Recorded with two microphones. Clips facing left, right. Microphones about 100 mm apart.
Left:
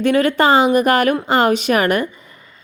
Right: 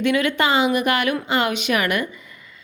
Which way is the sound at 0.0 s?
40° left (ahead or behind).